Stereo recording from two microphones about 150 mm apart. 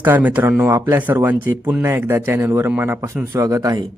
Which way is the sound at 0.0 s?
10° right (ahead or behind).